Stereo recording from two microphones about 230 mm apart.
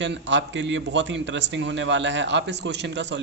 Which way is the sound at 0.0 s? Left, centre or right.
Right.